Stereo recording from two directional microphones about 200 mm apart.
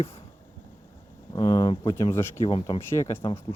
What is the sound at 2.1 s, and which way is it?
Speech, 15° left (ahead or behind).